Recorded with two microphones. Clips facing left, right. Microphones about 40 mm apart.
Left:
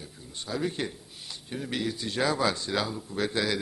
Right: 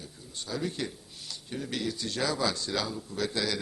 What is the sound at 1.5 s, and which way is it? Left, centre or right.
A man's voice, centre.